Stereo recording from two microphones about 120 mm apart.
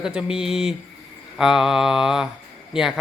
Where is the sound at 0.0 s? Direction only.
5° right (ahead or behind).